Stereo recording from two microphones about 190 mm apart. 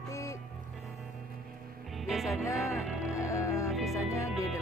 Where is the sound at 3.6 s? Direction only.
Centre (ahead or behind).